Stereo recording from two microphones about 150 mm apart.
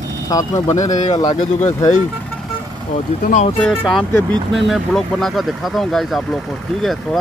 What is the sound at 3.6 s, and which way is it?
Speech, 5° left (ahead or behind).